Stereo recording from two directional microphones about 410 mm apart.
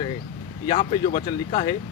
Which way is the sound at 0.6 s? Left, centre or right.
Centre.